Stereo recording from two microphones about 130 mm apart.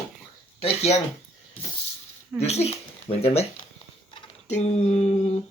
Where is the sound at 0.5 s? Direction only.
55° left (ahead or behind).